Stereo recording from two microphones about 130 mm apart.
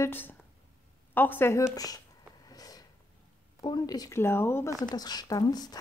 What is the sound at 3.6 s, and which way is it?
Speech, 30° left (ahead or behind).